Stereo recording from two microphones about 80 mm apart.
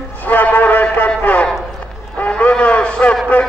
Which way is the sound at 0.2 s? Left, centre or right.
Left.